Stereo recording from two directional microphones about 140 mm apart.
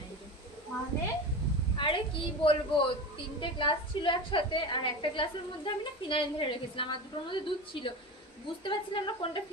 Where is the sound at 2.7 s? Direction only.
35° left (ahead or behind).